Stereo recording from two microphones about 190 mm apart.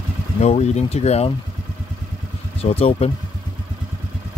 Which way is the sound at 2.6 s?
30° left (ahead or behind).